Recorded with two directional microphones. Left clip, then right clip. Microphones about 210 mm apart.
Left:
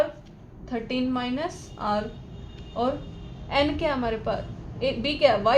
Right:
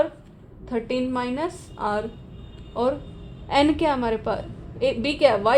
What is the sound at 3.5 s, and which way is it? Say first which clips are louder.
A woman's voice: right 4 dB; 45° right (ahead or behind).